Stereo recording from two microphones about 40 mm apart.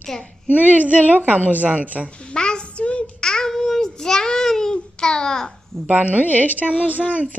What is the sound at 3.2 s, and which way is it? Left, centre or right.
Child singing, centre.